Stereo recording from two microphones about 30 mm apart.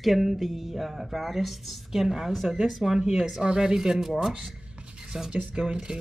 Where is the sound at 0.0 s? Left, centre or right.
Centre.